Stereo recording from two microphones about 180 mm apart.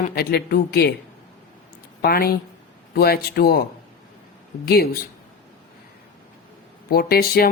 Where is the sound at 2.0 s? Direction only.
60° left (ahead or behind).